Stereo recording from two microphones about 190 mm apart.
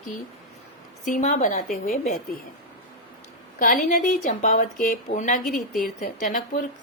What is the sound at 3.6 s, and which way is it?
A woman's voice, 40° left (ahead or behind).